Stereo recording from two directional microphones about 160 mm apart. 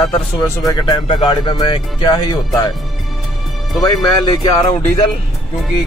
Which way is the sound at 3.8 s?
25° left (ahead or behind).